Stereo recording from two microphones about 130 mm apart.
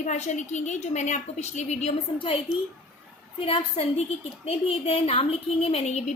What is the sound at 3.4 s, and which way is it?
A woman's voice, 45° left (ahead or behind).